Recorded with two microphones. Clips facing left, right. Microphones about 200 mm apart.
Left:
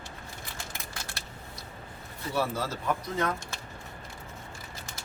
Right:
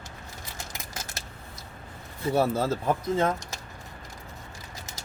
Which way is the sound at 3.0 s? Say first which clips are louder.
Right 5 dB; 25° right (ahead or behind).